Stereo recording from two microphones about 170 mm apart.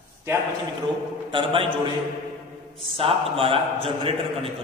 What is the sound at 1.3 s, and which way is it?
Speech, 30° right (ahead or behind).